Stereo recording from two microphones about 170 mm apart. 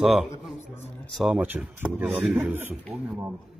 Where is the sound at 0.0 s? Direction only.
5° right (ahead or behind).